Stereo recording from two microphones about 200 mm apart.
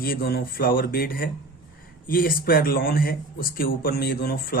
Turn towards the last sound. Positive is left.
turn(degrees=45)  # may be behind; listen again after turning